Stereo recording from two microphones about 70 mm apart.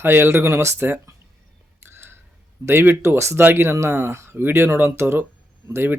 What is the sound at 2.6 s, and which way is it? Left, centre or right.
Speech, right.